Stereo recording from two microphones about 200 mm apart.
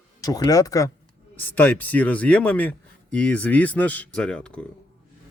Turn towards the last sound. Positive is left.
turn(degrees=5)  # may be behind; listen again after turning